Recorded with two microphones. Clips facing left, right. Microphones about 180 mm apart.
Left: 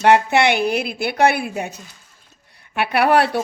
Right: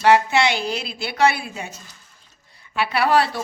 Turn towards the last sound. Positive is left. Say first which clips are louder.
# left 3 dB
turn(degrees=60)  # may be behind; listen again after turning